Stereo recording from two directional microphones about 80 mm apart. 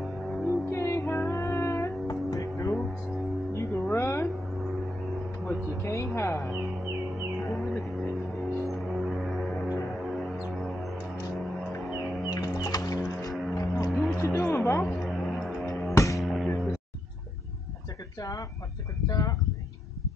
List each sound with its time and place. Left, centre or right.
0.0 s music: centre
0.5 s music: left
3.9 s a sound: left
5.5 s a sound: left
6.1 s music: left
7.3 s music: centre
12.0 s music: centre
12.3 s music: left
13.8 s music: centre
14.3 s music: left
14.8 s a sound: centre
15.9 s music: left
16.2 s music: centre
19.0 s a sound: left